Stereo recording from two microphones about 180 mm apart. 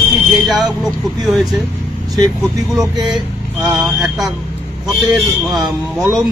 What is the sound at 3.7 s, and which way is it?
A man's voice, centre (ahead or behind).